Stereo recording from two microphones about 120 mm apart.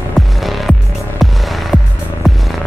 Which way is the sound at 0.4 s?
Centre (ahead or behind).